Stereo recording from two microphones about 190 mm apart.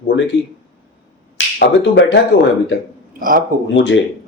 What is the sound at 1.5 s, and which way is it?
Speech, 60° left (ahead or behind).